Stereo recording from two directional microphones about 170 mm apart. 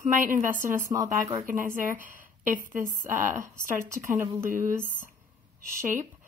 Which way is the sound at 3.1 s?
15° right (ahead or behind).